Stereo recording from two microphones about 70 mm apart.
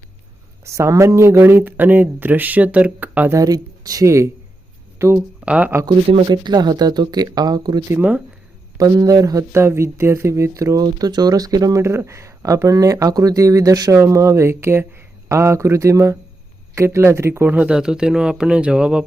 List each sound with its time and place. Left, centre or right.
0.6 s speech: right
3.3 s speech: right
5.4 s speech: centre
5.8 s speech: right
8.8 s speech: right
9.5 s speech: right
10.8 s speech: right
11.8 s speech: right
14.0 s speech: right
17.5 s speech: centre